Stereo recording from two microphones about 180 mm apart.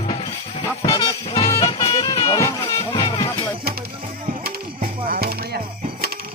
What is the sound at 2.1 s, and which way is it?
Music, 20° left (ahead or behind).